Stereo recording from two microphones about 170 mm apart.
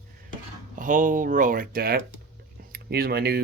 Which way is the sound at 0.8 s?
50° right (ahead or behind).